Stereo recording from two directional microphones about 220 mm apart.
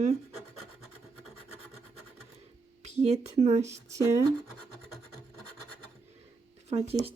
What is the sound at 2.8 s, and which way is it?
Speech, 30° right (ahead or behind).